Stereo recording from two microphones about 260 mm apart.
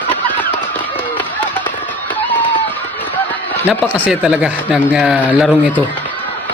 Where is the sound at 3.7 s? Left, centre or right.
Centre.